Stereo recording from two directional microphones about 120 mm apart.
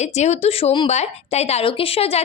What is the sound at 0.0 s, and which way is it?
Speech, 70° left (ahead or behind).